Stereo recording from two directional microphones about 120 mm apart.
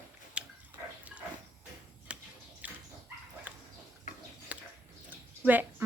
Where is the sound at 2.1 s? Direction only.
10° right (ahead or behind).